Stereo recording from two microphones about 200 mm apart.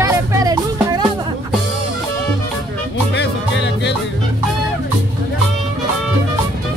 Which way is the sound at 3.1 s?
60° left (ahead or behind).